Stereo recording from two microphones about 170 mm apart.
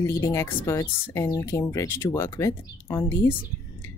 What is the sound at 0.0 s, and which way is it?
A woman's voice, 15° left (ahead or behind).